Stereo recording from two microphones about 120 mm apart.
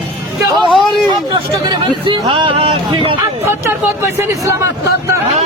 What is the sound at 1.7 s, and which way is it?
Hubbub, 45° right (ahead or behind).